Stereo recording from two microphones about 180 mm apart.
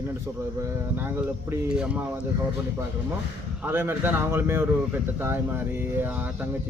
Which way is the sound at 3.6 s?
10° right (ahead or behind).